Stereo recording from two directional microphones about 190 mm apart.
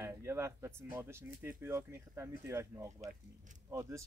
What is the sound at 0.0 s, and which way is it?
Speech, 15° right (ahead or behind).